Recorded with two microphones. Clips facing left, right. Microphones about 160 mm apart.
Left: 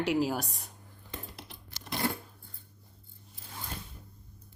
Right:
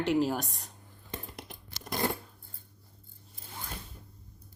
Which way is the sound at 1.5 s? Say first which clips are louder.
Right 3 dB; 50° right (ahead or behind).